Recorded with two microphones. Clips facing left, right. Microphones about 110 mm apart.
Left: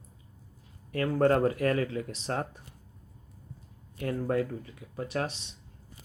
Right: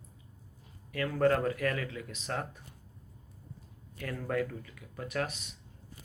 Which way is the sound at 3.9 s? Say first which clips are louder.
Left 5 dB; 30° left (ahead or behind).